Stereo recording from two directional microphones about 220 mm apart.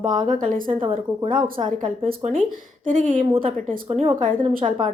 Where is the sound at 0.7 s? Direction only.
25° right (ahead or behind).